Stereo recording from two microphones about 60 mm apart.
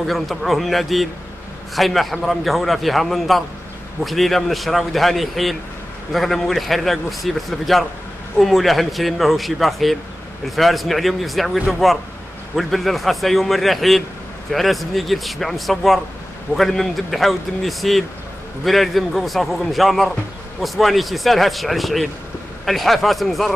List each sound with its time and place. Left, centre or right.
0.0 s a man's voice: centre